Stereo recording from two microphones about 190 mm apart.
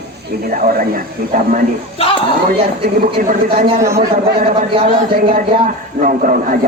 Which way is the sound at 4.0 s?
50° right (ahead or behind).